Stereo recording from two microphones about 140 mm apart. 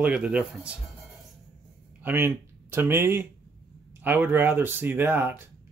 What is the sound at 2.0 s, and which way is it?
Speech, 15° right (ahead or behind).